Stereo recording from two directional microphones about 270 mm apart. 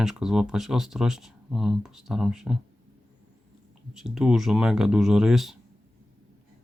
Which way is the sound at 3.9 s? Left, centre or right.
Centre.